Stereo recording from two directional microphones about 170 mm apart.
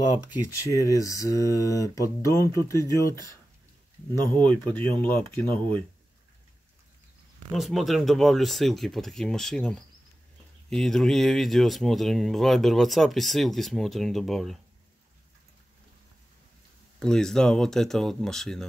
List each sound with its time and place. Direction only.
0.5 s speech: 20° left (ahead or behind)
4.4 s speech: 10° left (ahead or behind)
7.5 s speech: centre (ahead or behind)
17.0 s speech: 5° left (ahead or behind)